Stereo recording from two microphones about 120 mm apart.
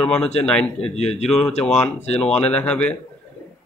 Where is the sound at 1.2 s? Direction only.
5° left (ahead or behind).